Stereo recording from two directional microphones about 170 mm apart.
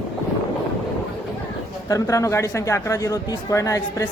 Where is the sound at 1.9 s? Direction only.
20° left (ahead or behind).